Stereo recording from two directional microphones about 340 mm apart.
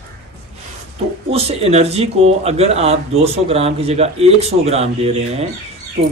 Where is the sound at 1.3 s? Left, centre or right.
Centre.